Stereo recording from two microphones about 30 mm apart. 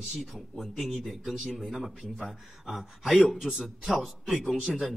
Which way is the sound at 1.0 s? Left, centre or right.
Centre.